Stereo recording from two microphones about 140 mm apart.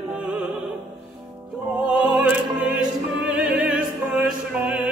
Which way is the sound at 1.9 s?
5° right (ahead or behind).